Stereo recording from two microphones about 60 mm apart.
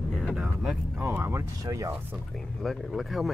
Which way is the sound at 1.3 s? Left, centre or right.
Right.